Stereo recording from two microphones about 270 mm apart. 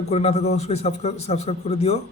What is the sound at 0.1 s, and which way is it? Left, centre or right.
A man's voice, left.